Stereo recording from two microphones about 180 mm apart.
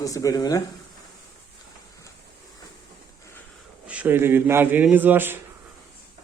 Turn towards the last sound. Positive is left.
turn(degrees=-10)  # may be behind; listen again after turning